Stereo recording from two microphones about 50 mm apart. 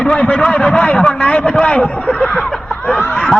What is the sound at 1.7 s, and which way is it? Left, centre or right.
Speech, left.